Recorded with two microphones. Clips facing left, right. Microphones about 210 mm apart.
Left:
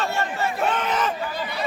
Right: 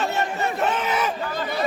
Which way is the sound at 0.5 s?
5° right (ahead or behind).